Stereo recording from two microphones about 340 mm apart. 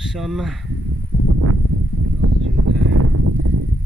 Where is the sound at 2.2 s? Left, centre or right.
Right.